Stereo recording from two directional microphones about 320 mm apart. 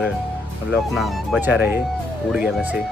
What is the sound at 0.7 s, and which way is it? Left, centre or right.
Speech, centre.